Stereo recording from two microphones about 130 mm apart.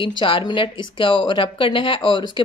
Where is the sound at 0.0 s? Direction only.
40° left (ahead or behind).